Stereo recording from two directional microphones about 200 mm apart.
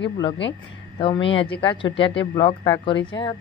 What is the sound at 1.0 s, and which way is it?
Speech, 25° left (ahead or behind).